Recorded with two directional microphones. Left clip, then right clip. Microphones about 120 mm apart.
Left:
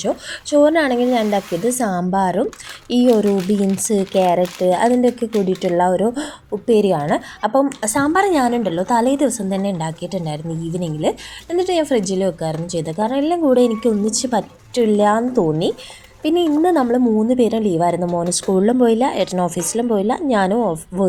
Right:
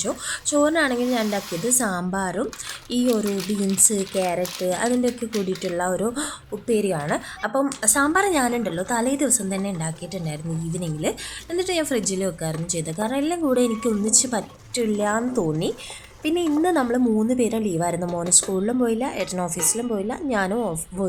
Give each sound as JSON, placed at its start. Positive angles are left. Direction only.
{"t": 0.0, "sound": "a woman's voice", "side_deg": 15}
{"t": 15.3, "sound": "a woman's voice", "side_deg": 15}
{"t": 18.0, "sound": "speech", "side_deg": 0}
{"t": 18.3, "sound": "a woman's voice", "side_deg": 25}